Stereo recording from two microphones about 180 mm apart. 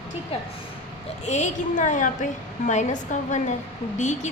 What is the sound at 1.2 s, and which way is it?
A woman's voice, 40° left (ahead or behind).